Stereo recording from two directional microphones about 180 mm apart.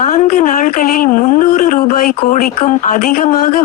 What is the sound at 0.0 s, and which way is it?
Speech, 45° left (ahead or behind).